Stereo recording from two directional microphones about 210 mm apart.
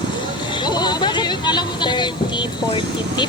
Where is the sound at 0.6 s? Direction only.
20° left (ahead or behind).